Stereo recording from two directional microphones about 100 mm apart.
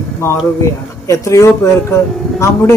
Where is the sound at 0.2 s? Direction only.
30° left (ahead or behind).